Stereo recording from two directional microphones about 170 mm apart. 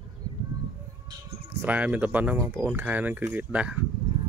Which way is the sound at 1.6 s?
10° right (ahead or behind).